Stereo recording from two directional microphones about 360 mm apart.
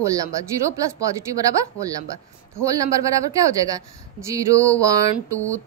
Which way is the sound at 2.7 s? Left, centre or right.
Centre.